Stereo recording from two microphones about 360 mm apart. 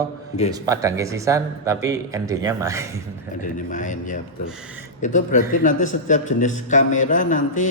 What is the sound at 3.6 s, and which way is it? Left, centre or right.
A man's voice, left.